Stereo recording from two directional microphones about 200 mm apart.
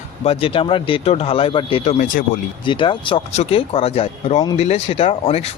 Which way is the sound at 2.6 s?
25° left (ahead or behind).